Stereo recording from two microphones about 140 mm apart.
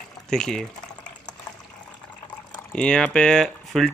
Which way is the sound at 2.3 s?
5° left (ahead or behind).